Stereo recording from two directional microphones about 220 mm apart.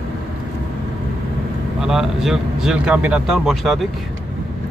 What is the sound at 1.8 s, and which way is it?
Speech, centre (ahead or behind).